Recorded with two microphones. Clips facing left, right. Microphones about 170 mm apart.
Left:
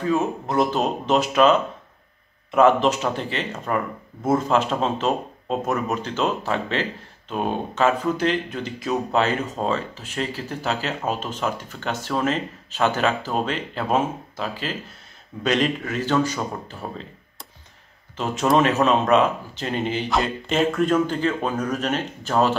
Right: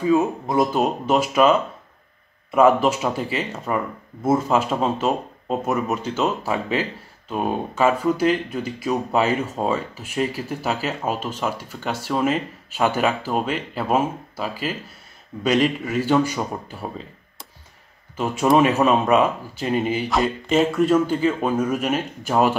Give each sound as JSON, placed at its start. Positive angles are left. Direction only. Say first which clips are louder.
{"t": 0.0, "sound": "speech", "louder": "right 4 dB", "side_deg": -10}
{"t": 18.1, "sound": "a man's voice", "louder": "right 2 dB", "side_deg": -10}